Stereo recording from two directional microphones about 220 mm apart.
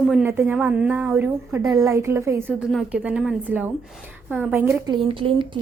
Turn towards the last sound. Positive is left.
turn(degrees=-25)  # may be behind; listen again after turning